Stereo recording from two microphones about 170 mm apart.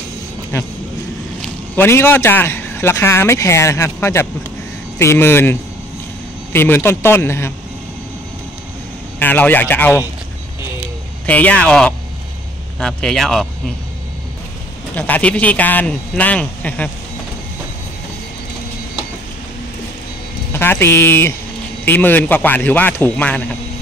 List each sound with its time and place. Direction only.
0.5 s a man's voice: 15° left (ahead or behind)
9.2 s a man's voice: 10° left (ahead or behind)
11.2 s a man's voice: 10° left (ahead or behind)
15.0 s a man's voice: 10° left (ahead or behind)
20.5 s a man's voice: 15° left (ahead or behind)